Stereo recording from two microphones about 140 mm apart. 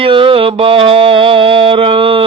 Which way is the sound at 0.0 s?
40° right (ahead or behind).